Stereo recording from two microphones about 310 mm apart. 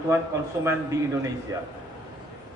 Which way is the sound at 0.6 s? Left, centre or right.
Centre.